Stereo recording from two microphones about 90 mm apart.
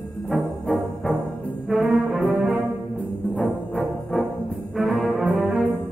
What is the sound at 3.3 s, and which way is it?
Music, centre (ahead or behind).